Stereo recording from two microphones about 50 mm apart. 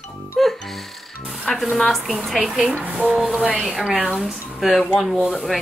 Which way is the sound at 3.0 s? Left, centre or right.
Centre.